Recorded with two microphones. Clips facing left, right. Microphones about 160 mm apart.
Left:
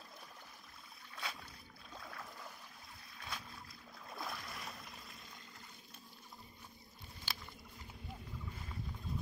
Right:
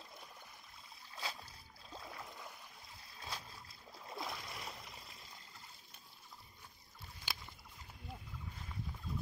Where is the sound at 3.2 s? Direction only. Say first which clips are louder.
Right 1 dB; 30° right (ahead or behind).